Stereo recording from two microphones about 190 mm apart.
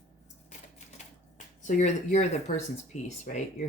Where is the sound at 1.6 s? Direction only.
40° left (ahead or behind).